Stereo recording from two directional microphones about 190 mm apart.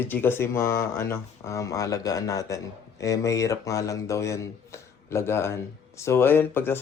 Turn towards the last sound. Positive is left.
turn(degrees=10)  # may be behind; listen again after turning